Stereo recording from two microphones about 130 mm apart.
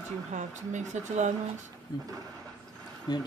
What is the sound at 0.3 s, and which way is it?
Speech, 65° right (ahead or behind).